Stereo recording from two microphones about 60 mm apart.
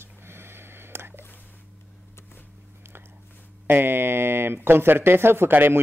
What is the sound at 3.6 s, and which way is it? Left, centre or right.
A man's voice, right.